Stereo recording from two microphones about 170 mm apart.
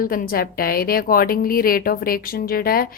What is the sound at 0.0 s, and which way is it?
A woman's voice, 55° left (ahead or behind).